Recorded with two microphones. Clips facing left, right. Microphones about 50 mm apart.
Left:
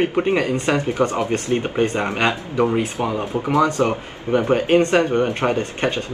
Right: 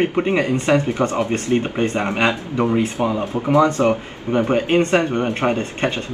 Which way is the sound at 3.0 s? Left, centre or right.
Centre.